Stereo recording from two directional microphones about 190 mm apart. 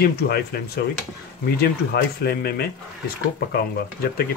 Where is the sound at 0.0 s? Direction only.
55° left (ahead or behind).